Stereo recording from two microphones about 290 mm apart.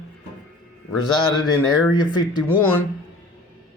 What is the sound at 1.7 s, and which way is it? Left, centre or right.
Speech, centre.